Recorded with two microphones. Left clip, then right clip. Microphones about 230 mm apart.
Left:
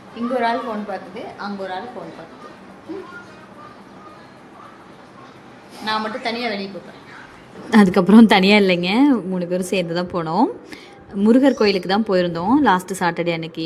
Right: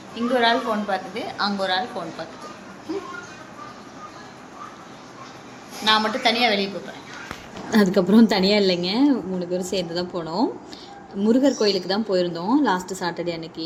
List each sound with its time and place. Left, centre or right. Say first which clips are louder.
0.3 s a woman's voice: right 1 dB; centre
5.8 s a woman's voice: right 4 dB; centre
7.7 s a woman's voice: left 4 dB; left